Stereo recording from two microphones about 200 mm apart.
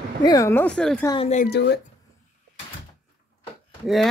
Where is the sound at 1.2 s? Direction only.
35° left (ahead or behind).